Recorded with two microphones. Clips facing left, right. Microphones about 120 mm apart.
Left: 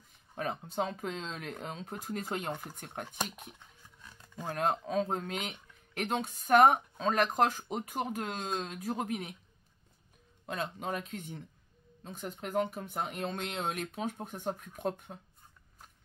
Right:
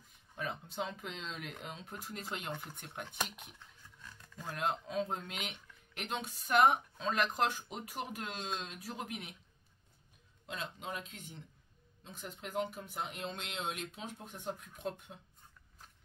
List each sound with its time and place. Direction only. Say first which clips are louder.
0.4 s speech: left 6 dB; 40° left (ahead or behind)
4.6 s speech: left 5 dB; 40° left (ahead or behind)
10.4 s speech: left 6 dB; 50° left (ahead or behind)